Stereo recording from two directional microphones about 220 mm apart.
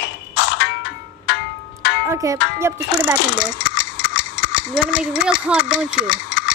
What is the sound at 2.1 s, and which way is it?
Music, 15° right (ahead or behind).